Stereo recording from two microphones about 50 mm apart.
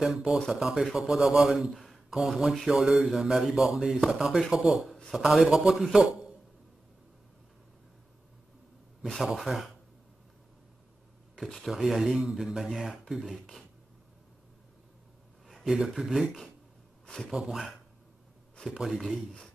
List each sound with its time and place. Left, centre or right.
0.5 s a man's voice: centre
2.1 s a man's voice: centre
9.2 s a man's voice: centre
11.6 s speech: centre
15.4 s a sound: centre
16.0 s speech: centre
17.0 s a sound: centre
17.3 s a man's voice: centre